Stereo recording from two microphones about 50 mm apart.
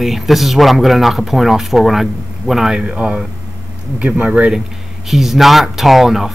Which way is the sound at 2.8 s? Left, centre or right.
Right.